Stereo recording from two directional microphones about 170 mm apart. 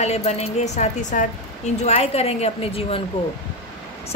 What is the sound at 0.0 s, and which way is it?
A woman's voice, 40° left (ahead or behind).